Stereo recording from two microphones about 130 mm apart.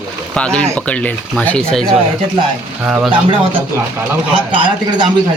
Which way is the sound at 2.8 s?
5° right (ahead or behind).